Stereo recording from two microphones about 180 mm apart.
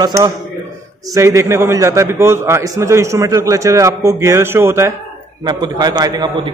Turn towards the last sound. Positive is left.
turn(degrees=-20)  # may be behind; listen again after turning